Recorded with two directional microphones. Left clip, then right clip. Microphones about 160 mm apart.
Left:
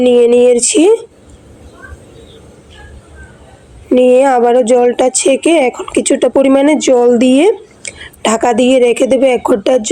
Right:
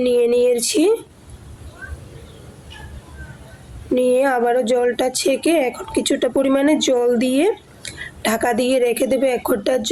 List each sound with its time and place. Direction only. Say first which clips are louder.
0.0 s a woman's voice: left 8 dB; 20° left (ahead or behind)
3.9 s a woman's voice: left 9 dB; 20° left (ahead or behind)